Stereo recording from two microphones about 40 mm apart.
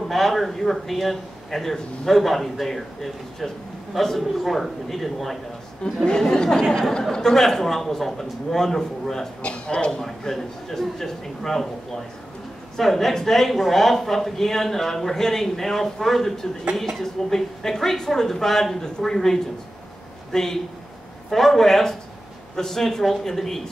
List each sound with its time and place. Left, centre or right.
0.1 s speech: centre
6.0 s speech: centre
9.4 s speech: left
10.0 s speech: centre
12.7 s speech: centre
21.3 s speech: centre